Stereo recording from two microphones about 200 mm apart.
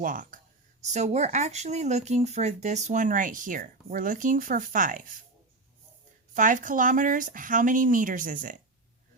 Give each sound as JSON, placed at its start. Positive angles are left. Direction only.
{"t": 0.0, "sound": "speech", "side_deg": -40}
{"t": 6.3, "sound": "speech", "side_deg": -40}